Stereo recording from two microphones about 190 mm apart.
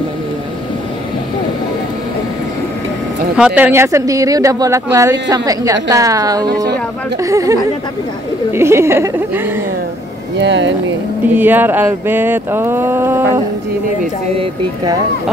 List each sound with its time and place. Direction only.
3.3 s speech: 5° right (ahead or behind)
8.5 s speech: 15° right (ahead or behind)
10.4 s speech: 70° right (ahead or behind)
11.3 s speech: 10° right (ahead or behind)